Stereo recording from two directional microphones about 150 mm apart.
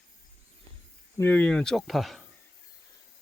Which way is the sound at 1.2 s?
10° left (ahead or behind).